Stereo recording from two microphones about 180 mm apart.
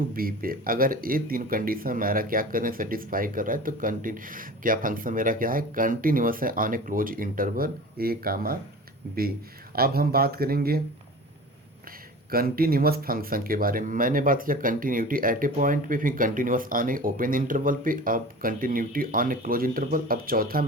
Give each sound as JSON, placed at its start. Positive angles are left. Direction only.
{"t": 0.1, "sound": "speech", "side_deg": -55}
{"t": 9.7, "sound": "speech", "side_deg": -55}
{"t": 12.3, "sound": "speech", "side_deg": -55}